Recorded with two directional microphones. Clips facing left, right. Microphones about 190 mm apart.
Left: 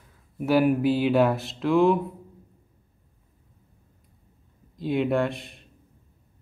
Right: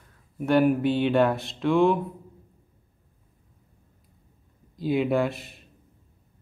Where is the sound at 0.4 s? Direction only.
5° left (ahead or behind).